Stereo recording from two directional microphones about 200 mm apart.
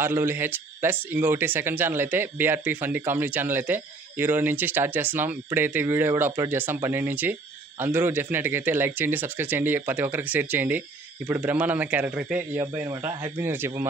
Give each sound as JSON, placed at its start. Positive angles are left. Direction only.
{"t": 0.0, "sound": "speech", "side_deg": -10}